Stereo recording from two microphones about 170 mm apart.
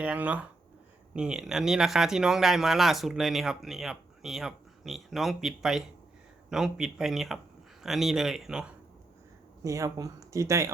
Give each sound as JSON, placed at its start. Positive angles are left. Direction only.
{"t": 0.0, "sound": "speech", "side_deg": -5}
{"t": 9.6, "sound": "speech", "side_deg": -20}